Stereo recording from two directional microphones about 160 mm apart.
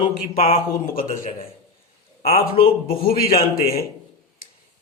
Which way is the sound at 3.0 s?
70° left (ahead or behind).